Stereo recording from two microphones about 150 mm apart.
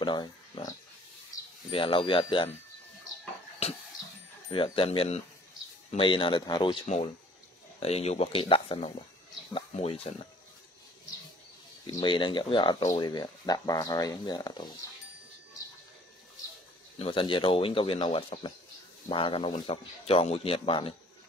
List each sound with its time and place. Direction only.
0.0 s speech: 30° left (ahead or behind)
3.6 s a sound: 45° left (ahead or behind)
4.5 s speech: 35° left (ahead or behind)
11.8 s speech: 30° left (ahead or behind)
17.0 s speech: 35° left (ahead or behind)